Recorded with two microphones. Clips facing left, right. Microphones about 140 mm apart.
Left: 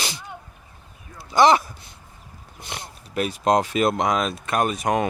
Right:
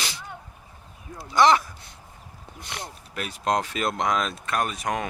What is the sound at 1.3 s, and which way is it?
Speech, 25° left (ahead or behind).